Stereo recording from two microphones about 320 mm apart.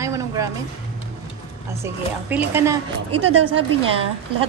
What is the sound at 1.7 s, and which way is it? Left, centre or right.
A woman's voice, centre.